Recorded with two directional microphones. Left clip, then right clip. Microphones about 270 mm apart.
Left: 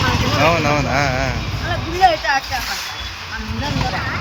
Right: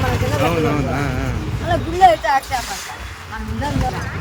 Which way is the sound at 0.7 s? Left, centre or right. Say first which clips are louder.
Left 4 dB; centre.